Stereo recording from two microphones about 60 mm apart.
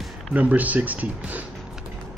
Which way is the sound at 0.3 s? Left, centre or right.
Right.